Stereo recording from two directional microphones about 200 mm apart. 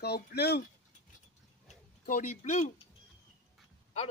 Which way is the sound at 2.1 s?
40° left (ahead or behind).